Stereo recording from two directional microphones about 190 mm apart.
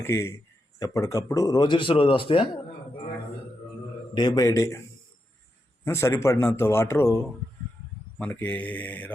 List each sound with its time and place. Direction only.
0.0 s a man's voice: 15° left (ahead or behind)
4.1 s speech: 20° left (ahead or behind)
5.8 s a man's voice: 15° left (ahead or behind)
8.2 s a man's voice: 10° left (ahead or behind)